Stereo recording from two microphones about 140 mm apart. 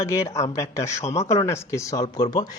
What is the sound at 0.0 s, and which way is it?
Speech, 20° left (ahead or behind).